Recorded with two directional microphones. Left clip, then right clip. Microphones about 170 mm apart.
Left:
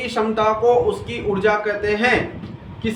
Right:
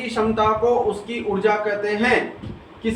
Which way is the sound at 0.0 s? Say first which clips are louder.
Left 1 dB; 45° left (ahead or behind).